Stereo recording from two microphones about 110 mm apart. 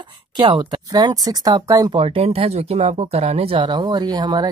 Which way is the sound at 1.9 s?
65° right (ahead or behind).